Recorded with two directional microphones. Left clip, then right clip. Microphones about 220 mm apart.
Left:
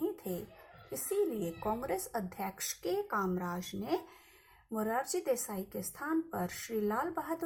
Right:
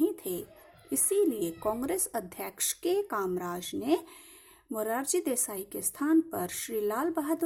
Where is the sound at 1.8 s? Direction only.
45° right (ahead or behind).